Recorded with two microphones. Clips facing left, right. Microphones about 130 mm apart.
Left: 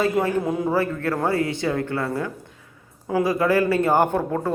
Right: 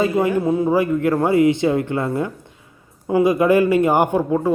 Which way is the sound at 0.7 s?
15° right (ahead or behind).